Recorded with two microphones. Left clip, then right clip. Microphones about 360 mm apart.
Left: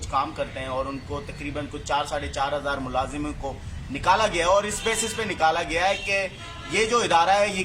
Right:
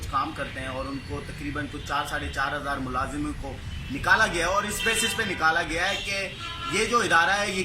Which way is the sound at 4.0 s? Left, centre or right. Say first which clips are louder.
Left 1 dB; centre.